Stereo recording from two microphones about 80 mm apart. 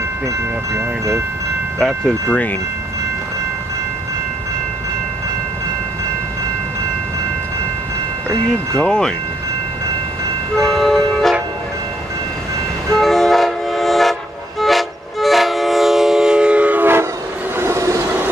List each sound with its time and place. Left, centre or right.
0.7 s speech: right
1.8 s speech: centre
2.2 s wind chime: left
8.7 s speech: centre
10.5 s train: centre
12.9 s train: centre
17.6 s train: right